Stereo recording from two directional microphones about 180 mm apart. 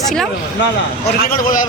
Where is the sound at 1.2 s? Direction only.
50° left (ahead or behind).